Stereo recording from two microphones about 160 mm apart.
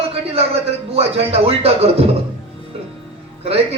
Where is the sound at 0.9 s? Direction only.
40° right (ahead or behind).